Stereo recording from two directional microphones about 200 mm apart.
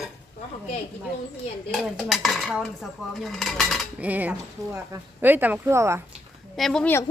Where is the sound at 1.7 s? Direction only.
Centre (ahead or behind).